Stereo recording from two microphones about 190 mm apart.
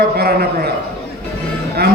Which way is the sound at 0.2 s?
55° right (ahead or behind).